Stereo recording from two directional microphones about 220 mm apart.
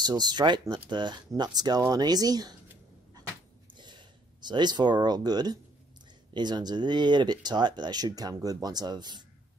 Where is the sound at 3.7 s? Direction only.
20° right (ahead or behind).